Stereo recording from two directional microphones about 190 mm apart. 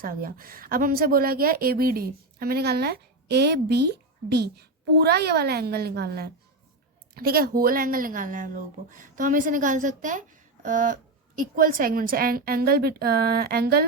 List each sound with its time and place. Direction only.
0.0 s a woman's voice: 50° right (ahead or behind)